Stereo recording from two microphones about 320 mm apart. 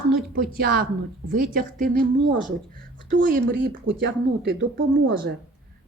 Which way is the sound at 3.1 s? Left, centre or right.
Right.